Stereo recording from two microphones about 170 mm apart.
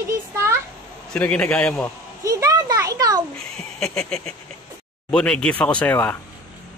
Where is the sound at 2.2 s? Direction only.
20° right (ahead or behind).